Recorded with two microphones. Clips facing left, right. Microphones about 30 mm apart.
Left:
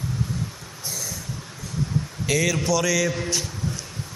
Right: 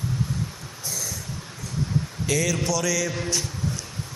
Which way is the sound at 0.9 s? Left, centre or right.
Centre.